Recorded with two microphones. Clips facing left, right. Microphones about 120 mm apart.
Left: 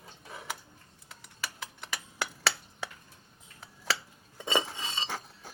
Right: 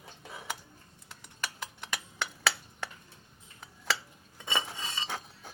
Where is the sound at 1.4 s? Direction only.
Centre (ahead or behind).